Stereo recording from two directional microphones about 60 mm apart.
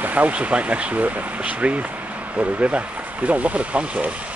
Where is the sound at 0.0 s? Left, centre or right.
Right.